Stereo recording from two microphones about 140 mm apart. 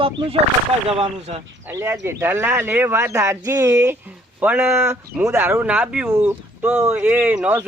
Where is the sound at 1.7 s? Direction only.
20° right (ahead or behind).